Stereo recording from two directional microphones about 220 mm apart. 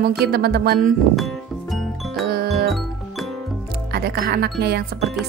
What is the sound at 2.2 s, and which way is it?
Music, 45° right (ahead or behind).